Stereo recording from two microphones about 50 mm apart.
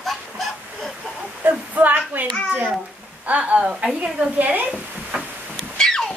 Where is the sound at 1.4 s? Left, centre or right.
Right.